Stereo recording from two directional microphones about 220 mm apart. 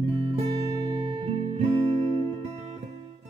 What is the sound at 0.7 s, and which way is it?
Music, 20° right (ahead or behind).